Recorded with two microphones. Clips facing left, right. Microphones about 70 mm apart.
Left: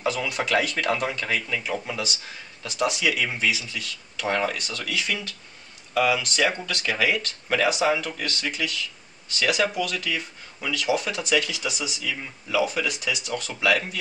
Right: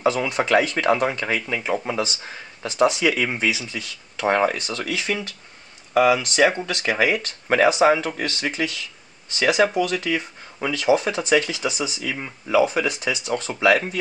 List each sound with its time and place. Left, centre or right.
0.0 s speech: right